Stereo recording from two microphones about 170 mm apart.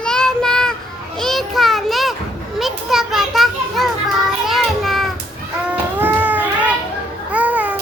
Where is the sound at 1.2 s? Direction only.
Centre (ahead or behind).